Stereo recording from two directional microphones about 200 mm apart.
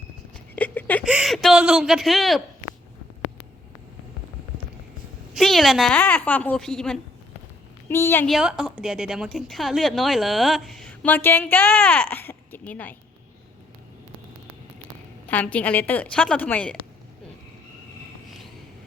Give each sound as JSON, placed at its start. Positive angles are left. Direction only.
{"t": 0.5, "sound": "a sound", "side_deg": 10}
{"t": 1.0, "sound": "a woman's voice", "side_deg": -5}
{"t": 5.3, "sound": "a woman's voice", "side_deg": 0}
{"t": 8.4, "sound": "a woman's voice", "side_deg": 0}
{"t": 15.3, "sound": "a woman's voice", "side_deg": 5}